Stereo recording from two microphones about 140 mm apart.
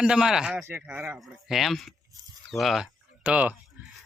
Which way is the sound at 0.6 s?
15° right (ahead or behind).